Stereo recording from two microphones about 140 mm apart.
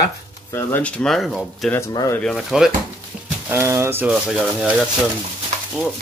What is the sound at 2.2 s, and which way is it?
Speech, centre (ahead or behind).